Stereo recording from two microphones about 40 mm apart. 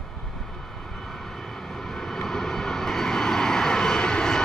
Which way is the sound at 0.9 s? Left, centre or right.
Centre.